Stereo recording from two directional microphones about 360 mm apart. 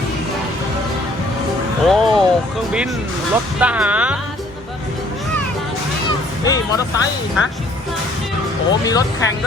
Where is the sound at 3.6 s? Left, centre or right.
Centre.